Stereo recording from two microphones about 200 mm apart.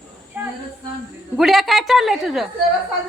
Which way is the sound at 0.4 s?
5° right (ahead or behind).